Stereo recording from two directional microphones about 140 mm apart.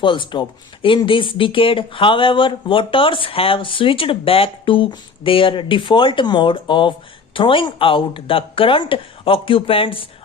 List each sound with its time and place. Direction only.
0.0 s speech: 35° left (ahead or behind)